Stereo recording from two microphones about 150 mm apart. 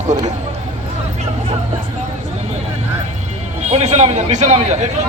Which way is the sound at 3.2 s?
45° right (ahead or behind).